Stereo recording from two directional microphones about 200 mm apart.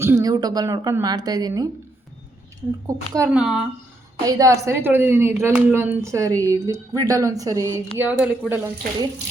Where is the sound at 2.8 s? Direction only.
15° right (ahead or behind).